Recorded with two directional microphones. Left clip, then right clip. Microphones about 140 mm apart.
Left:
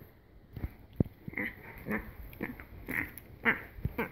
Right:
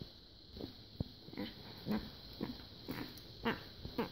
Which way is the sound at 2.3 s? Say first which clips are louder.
Left 6 dB; 10° right (ahead or behind).